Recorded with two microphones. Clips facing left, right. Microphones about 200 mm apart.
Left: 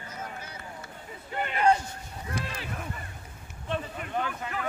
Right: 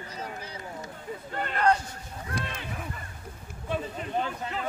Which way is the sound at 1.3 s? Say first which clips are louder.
Left 1 dB; 10° left (ahead or behind).